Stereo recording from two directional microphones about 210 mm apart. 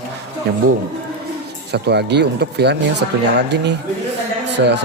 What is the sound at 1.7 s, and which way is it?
Speech, 50° right (ahead or behind).